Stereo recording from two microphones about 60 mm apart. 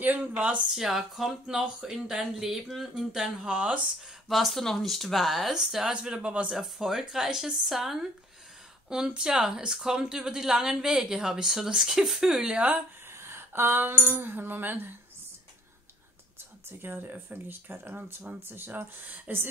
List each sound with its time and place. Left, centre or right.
0.0 s speech: right
0.7 s speech: centre
3.4 s speech: right
4.3 s speech: centre
6.5 s speech: centre
13.1 s a sound: right
14.2 s speech: right
16.8 s speech: right